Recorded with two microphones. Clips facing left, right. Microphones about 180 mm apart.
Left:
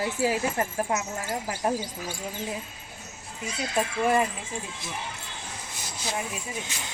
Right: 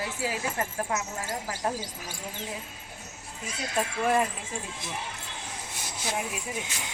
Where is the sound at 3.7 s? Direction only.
5° left (ahead or behind).